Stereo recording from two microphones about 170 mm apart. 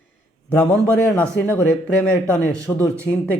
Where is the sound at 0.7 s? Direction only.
10° left (ahead or behind).